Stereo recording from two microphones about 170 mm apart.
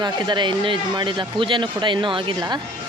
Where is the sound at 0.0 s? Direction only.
25° right (ahead or behind).